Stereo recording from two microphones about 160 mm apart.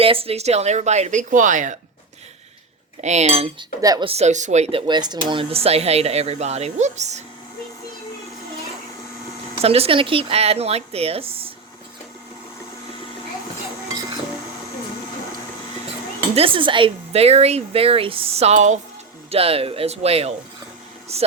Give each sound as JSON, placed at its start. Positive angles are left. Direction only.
{"t": 0.0, "sound": "speech", "side_deg": -35}
{"t": 3.0, "sound": "speech", "side_deg": -45}
{"t": 3.8, "sound": "a woman's voice", "side_deg": -20}
{"t": 4.0, "sound": "speech", "side_deg": -40}
{"t": 4.9, "sound": "speech", "side_deg": -25}
{"t": 9.6, "sound": "speech", "side_deg": -40}
{"t": 16.3, "sound": "speech", "side_deg": -35}
{"t": 19.3, "sound": "speech", "side_deg": -35}